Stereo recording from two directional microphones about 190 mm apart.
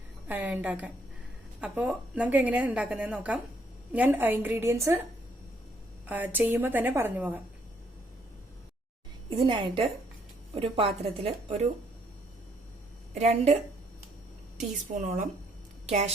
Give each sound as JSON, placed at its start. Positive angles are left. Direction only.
{"t": 0.3, "sound": "a woman's voice", "side_deg": -10}
{"t": 6.1, "sound": "a woman's voice", "side_deg": -10}
{"t": 9.3, "sound": "a woman's voice", "side_deg": -30}
{"t": 13.1, "sound": "a woman's voice", "side_deg": -35}
{"t": 14.9, "sound": "a woman's voice", "side_deg": -40}